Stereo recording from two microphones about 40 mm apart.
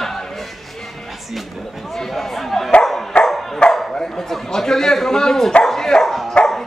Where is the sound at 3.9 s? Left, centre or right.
Centre.